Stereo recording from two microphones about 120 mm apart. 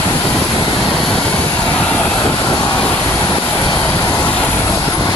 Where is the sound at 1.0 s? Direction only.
5° left (ahead or behind).